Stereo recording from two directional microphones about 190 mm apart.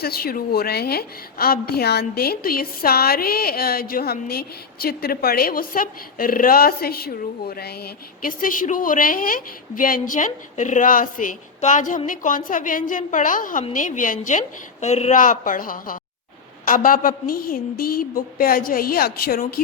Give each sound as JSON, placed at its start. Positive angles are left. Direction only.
{"t": 0.0, "sound": "a woman's voice", "side_deg": 55}